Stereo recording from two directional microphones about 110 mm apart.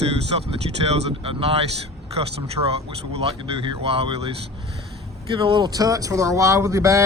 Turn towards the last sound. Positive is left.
turn(degrees=-30)  # may be behind; listen again after turning